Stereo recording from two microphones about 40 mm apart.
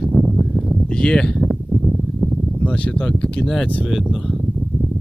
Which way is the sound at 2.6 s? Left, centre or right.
Left.